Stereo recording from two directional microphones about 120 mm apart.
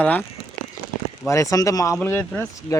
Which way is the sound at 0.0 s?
15° left (ahead or behind).